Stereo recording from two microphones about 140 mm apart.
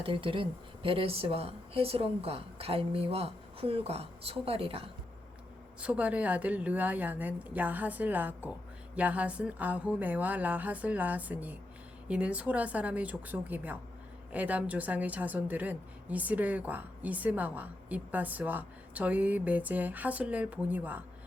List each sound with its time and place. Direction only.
0.0 s speech: 40° right (ahead or behind)
5.8 s a woman's voice: 10° right (ahead or behind)